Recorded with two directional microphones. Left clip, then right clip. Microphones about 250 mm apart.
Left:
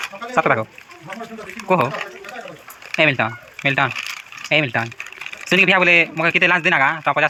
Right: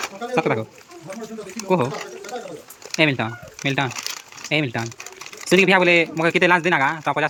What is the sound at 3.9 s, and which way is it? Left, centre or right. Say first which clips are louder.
Crumpling: left 3 dB; right.